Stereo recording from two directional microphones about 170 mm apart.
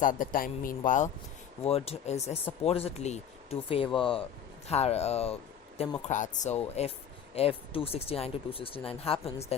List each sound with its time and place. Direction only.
0.0 s speech: 50° left (ahead or behind); by 5.9 s 35° left (ahead or behind)
6.1 s speech: 50° left (ahead or behind)